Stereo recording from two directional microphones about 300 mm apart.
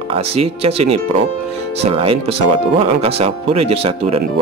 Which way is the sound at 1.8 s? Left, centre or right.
Centre.